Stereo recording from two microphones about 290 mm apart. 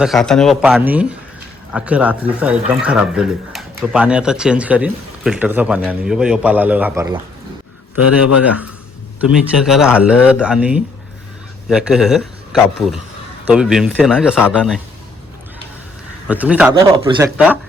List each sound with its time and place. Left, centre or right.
0.0 s speech: centre
9.2 s speech: centre
16.2 s speech: centre
16.8 s speech: centre
17.3 s speech: centre